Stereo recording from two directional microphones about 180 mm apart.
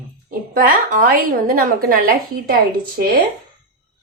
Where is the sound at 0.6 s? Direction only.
50° right (ahead or behind).